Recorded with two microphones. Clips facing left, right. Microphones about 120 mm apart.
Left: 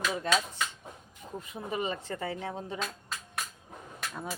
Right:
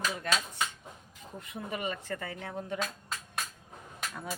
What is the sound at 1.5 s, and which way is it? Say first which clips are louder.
A woman's voice: left 2 dB; 25° left (ahead or behind).